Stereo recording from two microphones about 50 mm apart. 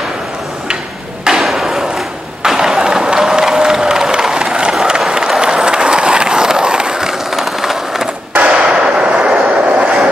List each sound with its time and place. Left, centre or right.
1.4 s a sound: centre
8.4 s hammer: right
9.2 s train: right